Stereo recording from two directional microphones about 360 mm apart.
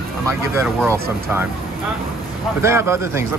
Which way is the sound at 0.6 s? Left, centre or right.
Centre.